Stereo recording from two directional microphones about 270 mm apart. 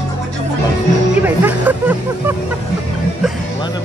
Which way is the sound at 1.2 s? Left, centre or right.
Centre.